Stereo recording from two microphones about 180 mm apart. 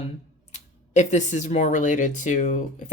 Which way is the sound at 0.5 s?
40° left (ahead or behind).